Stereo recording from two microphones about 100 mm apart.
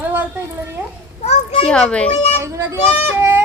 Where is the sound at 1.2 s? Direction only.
80° left.